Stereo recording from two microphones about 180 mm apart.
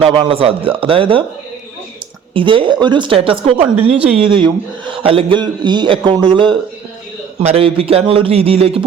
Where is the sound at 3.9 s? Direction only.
5° right (ahead or behind).